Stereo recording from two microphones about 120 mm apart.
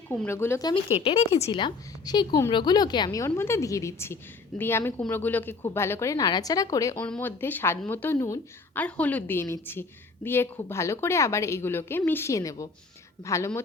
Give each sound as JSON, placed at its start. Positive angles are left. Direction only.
{"t": 0.3, "sound": "a woman's voice", "side_deg": 20}
{"t": 0.9, "sound": "speech", "side_deg": 60}
{"t": 1.5, "sound": "a woman's voice", "side_deg": 40}
{"t": 7.2, "sound": "a woman's voice", "side_deg": 15}